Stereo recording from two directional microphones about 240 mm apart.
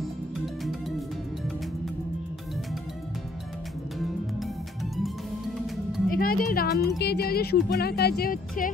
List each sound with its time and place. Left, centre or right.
0.7 s music: centre
6.0 s speech: left